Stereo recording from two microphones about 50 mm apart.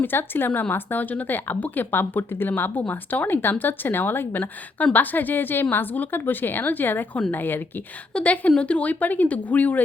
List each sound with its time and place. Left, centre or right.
0.0 s speech: left
2.8 s speech: left
4.8 s speech: left
8.1 s speech: left